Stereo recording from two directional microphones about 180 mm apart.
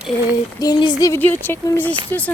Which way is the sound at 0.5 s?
20° left (ahead or behind).